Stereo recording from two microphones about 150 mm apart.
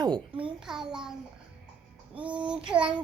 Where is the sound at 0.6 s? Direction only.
5° right (ahead or behind).